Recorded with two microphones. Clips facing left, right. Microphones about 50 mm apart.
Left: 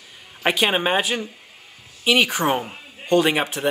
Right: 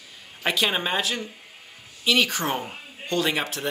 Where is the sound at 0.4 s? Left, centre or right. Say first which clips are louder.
Left 4 dB; left.